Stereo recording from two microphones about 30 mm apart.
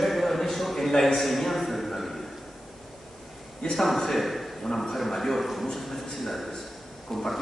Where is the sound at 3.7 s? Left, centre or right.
Centre.